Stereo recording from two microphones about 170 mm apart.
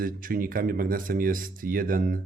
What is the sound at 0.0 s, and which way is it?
Speech, 55° right (ahead or behind).